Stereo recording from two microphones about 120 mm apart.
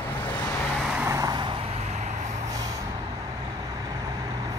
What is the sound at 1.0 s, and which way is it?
Vehicle, 25° right (ahead or behind).